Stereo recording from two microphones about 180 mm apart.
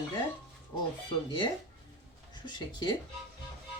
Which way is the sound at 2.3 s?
25° left (ahead or behind).